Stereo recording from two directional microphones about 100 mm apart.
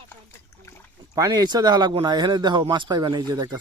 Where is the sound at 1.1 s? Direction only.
35° right (ahead or behind).